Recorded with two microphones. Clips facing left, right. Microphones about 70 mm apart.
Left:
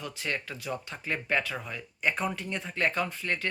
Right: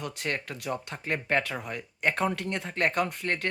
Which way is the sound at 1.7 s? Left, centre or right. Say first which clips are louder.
Right 2 dB; right.